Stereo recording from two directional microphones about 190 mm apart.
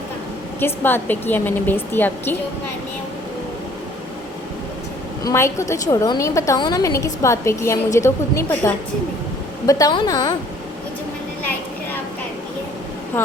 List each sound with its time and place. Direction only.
0.6 s a woman's voice: 10° left (ahead or behind)
5.2 s a woman's voice: 15° left (ahead or behind)
13.2 s vehicle: 10° left (ahead or behind)